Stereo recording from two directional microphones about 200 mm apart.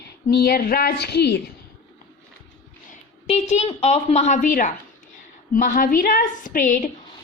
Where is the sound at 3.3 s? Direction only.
30° left (ahead or behind).